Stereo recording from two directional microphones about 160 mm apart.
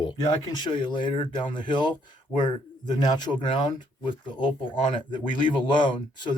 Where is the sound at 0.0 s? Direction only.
30° left (ahead or behind).